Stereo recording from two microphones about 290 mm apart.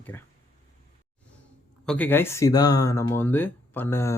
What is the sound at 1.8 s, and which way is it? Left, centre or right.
Speech, centre.